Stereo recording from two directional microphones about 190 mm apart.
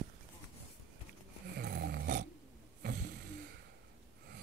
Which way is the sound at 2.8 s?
60° right (ahead or behind).